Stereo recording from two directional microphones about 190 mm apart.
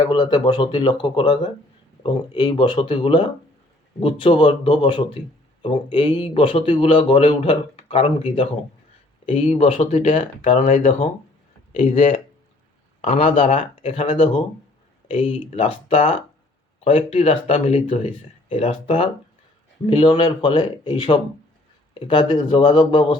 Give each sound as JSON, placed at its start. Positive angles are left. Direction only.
{"t": 0.0, "sound": "a man's voice", "side_deg": 20}